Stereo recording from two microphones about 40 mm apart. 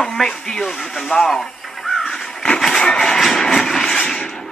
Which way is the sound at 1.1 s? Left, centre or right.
Left.